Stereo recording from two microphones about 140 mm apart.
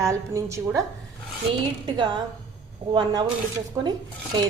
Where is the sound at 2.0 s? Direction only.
35° right (ahead or behind).